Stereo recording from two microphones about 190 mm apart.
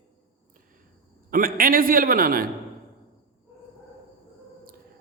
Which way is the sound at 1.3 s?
50° right (ahead or behind).